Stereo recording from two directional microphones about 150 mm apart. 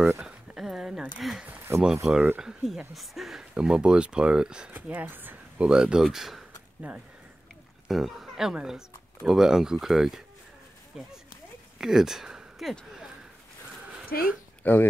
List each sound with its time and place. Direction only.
0.0 s a sound: 5° right (ahead or behind)
2.0 s speech: 10° right (ahead or behind)
14.1 s speech: 90° left
14.6 s speech: 10° left (ahead or behind)